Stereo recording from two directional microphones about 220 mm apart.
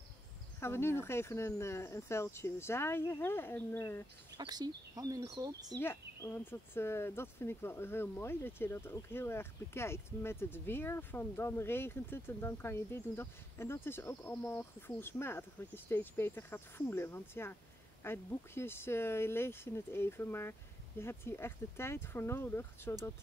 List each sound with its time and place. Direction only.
0.6 s speech: 10° left (ahead or behind)
4.4 s speech: 20° right (ahead or behind)
5.8 s speech: 10° left (ahead or behind)